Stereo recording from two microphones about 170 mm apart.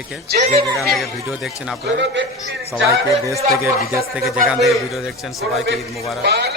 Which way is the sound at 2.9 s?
20° right (ahead or behind).